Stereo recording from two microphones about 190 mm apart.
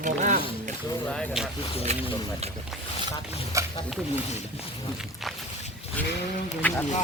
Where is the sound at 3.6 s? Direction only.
15° right (ahead or behind).